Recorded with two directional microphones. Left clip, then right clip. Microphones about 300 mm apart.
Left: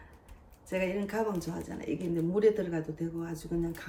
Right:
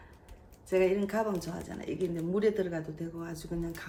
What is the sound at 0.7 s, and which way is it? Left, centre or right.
Speech, centre.